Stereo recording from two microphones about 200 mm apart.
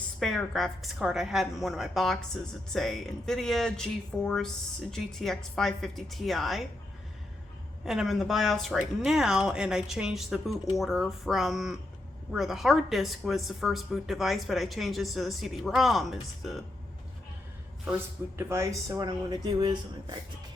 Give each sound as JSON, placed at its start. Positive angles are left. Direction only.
{"t": 0.2, "sound": "a woman's voice", "side_deg": 0}
{"t": 7.9, "sound": "a woman's voice", "side_deg": 0}
{"t": 18.3, "sound": "speech", "side_deg": -15}